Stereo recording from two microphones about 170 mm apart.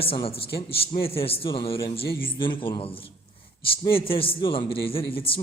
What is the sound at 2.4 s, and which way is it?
A man's voice, 30° left (ahead or behind).